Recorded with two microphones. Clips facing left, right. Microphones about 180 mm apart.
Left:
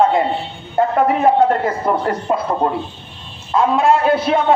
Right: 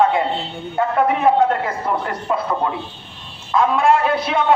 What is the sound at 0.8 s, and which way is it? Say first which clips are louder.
Speech: left 3 dB; 40° left (ahead or behind).